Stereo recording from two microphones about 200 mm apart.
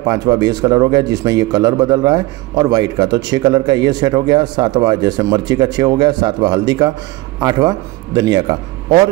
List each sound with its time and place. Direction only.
0.0 s a man's voice: 20° right (ahead or behind)